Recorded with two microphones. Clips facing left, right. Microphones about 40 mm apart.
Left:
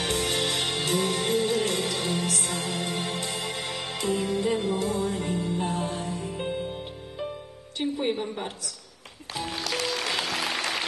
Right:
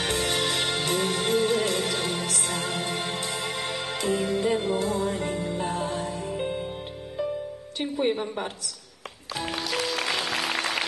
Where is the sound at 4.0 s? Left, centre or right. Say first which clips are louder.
Right 1 dB; right.